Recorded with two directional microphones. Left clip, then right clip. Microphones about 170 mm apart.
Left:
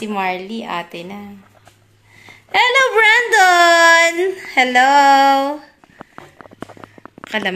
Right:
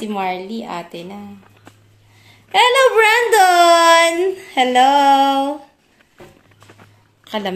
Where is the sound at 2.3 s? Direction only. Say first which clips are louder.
Right 1 dB; 10° right (ahead or behind).